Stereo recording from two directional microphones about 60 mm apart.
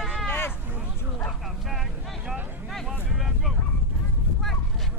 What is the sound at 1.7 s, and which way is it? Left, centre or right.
Vehicle, centre.